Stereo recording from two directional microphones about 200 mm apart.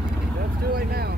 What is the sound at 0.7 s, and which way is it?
Vehicle, 50° right (ahead or behind).